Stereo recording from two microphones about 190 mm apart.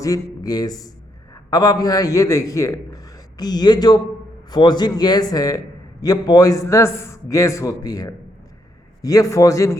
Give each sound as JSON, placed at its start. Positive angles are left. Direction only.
{"t": 0.0, "sound": "a man's voice", "side_deg": 20}